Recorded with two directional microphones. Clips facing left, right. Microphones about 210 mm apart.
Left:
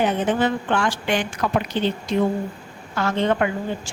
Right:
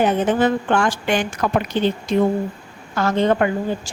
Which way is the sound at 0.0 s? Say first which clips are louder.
Right 3 dB; 45° right (ahead or behind).